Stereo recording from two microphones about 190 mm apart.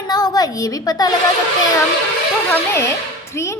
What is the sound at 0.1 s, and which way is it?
A woman's voice, 20° left (ahead or behind).